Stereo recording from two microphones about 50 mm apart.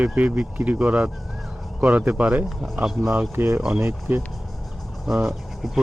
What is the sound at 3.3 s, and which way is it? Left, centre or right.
Speech, right.